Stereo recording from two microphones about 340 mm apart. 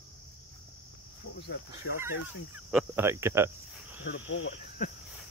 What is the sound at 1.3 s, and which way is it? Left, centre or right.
Speech, left.